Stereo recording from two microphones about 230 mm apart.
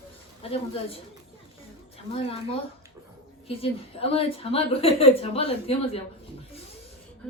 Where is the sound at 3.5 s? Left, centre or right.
Left.